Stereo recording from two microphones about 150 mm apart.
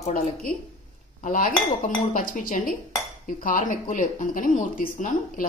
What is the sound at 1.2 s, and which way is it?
Dishes, 60° left (ahead or behind).